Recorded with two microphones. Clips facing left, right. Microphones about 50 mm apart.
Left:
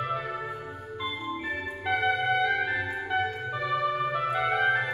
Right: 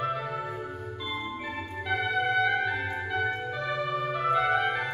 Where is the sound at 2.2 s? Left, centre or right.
Centre.